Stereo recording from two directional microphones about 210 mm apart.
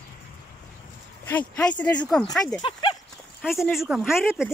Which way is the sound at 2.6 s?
20° left (ahead or behind).